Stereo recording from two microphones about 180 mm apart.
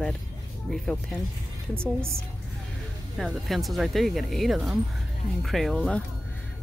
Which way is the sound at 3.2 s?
Centre (ahead or behind).